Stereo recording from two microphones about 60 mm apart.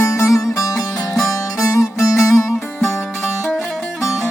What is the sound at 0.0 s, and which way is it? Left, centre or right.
Music, left.